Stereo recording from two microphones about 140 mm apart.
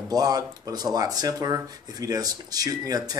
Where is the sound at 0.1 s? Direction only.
25° right (ahead or behind).